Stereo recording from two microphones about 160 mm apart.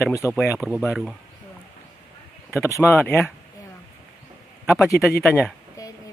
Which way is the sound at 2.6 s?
15° left (ahead or behind).